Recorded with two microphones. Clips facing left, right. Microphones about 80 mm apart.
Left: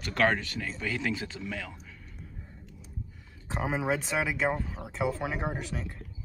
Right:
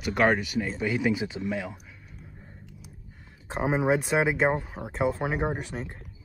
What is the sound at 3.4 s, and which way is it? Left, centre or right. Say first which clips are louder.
Speech: right 5 dB; right.